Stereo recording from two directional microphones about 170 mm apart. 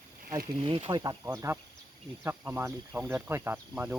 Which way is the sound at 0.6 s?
30° right (ahead or behind).